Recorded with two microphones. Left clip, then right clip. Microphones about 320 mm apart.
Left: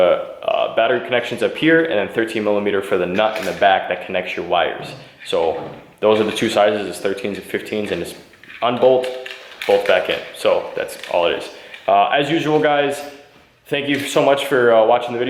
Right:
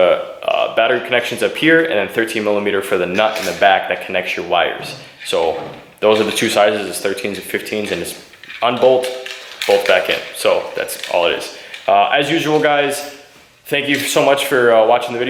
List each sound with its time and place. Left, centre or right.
0.0 s a sound: centre
0.8 s speech: centre
5.5 s speech: centre
6.0 s speech: centre